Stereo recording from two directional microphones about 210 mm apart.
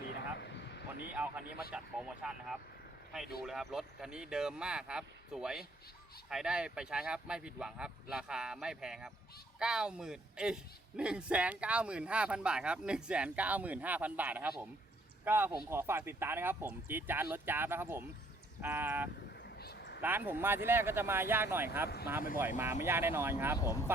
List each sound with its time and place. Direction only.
0.0 s vehicle: 50° left (ahead or behind)
1.1 s a man's voice: 5° right (ahead or behind)
19.5 s a sound: 50° left (ahead or behind)
20.0 s speech: 10° right (ahead or behind)